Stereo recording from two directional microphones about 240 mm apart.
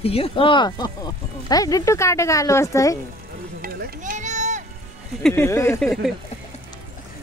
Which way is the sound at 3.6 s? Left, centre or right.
Right.